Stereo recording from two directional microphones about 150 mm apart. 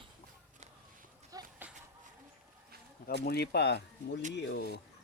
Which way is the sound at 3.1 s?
90° left.